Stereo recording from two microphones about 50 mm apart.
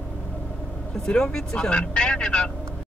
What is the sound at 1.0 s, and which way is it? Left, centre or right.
Speech, centre.